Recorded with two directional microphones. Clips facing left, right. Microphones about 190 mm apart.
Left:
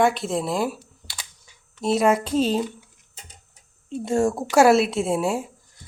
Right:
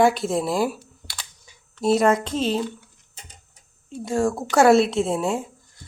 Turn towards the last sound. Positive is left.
turn(degrees=10)  # may be behind; listen again after turning